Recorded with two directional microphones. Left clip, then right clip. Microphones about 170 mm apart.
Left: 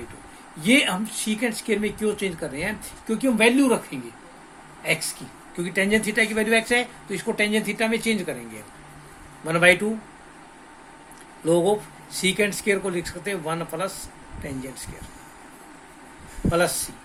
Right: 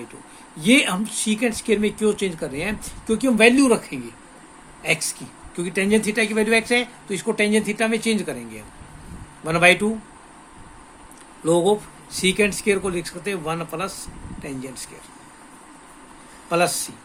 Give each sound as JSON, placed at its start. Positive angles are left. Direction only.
{"t": 0.6, "sound": "speech", "side_deg": -60}
{"t": 9.5, "sound": "speech", "side_deg": -65}
{"t": 11.4, "sound": "speech", "side_deg": -60}
{"t": 16.5, "sound": "speech", "side_deg": -60}